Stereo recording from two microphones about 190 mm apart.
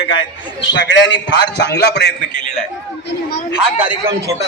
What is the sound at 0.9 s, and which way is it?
A man's voice, 65° left (ahead or behind).